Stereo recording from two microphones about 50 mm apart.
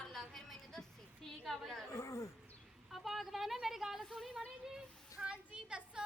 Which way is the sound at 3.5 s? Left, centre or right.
Centre.